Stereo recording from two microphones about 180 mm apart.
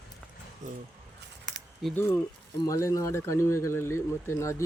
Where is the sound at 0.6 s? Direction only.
45° right (ahead or behind).